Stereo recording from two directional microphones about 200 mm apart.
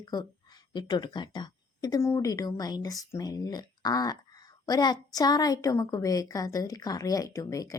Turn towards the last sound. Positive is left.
turn(degrees=15)  # may be behind; listen again after turning